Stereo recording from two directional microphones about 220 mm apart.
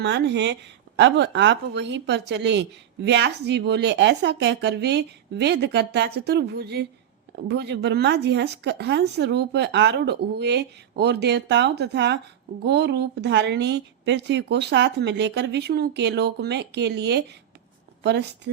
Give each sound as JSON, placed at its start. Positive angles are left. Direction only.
{"t": 0.0, "sound": "a woman's voice", "side_deg": -50}